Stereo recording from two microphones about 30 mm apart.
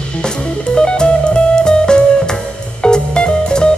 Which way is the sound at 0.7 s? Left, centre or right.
Left.